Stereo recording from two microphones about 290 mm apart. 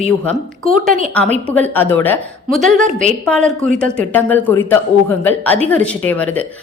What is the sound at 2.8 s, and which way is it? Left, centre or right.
Speech, right.